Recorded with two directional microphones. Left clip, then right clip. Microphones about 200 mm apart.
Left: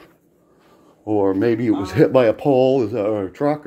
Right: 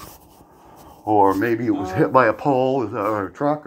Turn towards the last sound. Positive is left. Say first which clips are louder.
# left 1 dB
turn(degrees=35)  # may be behind; listen again after turning